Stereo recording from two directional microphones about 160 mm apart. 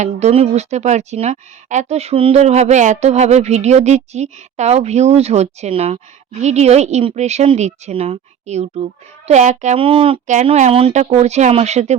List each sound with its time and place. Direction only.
0.0 s speech: 45° right (ahead or behind)
9.8 s speech: 35° right (ahead or behind)